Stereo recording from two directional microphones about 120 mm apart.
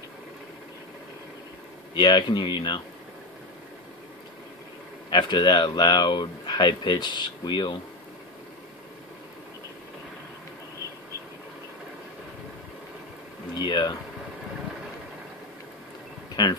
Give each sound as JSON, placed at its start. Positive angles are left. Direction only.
{"t": 2.0, "sound": "speech", "side_deg": 40}
{"t": 5.1, "sound": "speech", "side_deg": 40}
{"t": 13.6, "sound": "speech", "side_deg": 40}
{"t": 16.4, "sound": "speech", "side_deg": 40}